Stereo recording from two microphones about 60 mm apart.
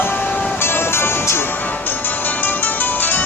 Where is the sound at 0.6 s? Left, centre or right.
Left.